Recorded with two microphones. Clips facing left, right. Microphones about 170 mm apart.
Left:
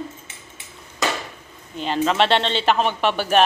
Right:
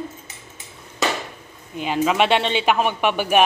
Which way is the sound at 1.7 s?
10° right (ahead or behind).